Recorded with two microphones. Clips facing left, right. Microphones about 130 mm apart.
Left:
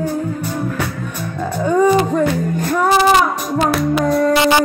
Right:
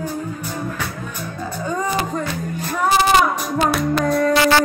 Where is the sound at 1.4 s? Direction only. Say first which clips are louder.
Left 10 dB; 65° left (ahead or behind).